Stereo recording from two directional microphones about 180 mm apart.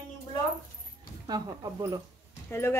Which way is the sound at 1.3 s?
20° right (ahead or behind).